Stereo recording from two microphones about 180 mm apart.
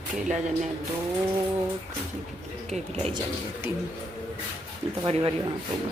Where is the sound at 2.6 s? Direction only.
35° right (ahead or behind).